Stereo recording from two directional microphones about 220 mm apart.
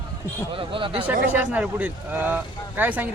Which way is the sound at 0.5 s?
25° right (ahead or behind).